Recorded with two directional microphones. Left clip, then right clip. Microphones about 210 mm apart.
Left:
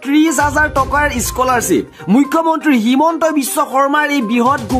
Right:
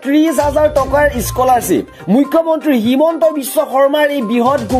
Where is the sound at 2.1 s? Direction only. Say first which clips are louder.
Right 1 dB; 15° left (ahead or behind).